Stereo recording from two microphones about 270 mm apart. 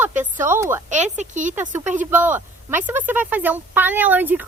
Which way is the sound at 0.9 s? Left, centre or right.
Right.